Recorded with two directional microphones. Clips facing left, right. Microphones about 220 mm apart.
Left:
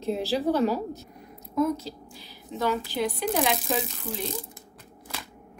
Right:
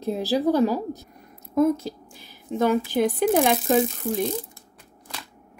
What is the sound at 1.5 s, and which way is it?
A woman's voice, 50° right (ahead or behind).